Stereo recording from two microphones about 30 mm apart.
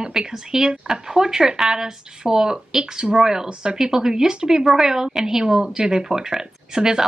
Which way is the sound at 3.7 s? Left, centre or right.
Centre.